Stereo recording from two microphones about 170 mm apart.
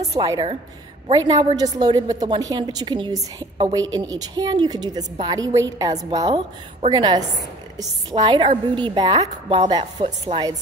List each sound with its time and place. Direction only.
0.1 s a woman's voice: 20° right (ahead or behind)